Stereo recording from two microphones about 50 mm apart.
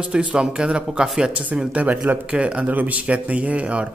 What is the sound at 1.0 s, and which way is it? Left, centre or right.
Speech, centre.